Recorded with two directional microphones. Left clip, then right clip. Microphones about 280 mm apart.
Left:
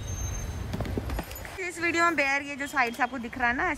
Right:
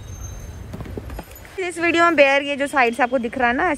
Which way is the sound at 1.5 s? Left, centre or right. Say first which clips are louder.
Right 8 dB; centre.